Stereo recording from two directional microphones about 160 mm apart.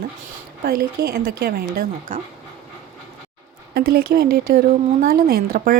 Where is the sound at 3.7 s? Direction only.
75° right (ahead or behind).